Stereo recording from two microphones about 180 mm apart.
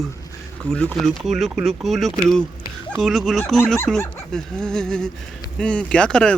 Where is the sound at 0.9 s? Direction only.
Centre (ahead or behind).